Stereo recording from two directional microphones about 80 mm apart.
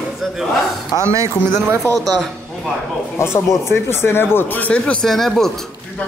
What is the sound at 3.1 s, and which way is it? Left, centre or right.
Speech, left.